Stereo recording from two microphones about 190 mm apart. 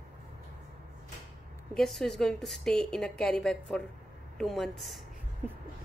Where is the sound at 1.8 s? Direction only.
Centre (ahead or behind).